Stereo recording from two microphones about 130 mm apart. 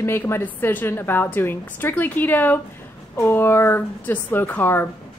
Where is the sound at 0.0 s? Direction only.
20° left (ahead or behind).